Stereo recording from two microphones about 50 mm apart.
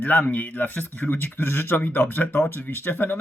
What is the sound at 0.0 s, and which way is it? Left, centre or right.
Speech, left.